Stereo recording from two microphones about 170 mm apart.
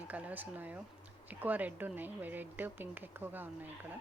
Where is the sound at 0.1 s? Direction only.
10° right (ahead or behind).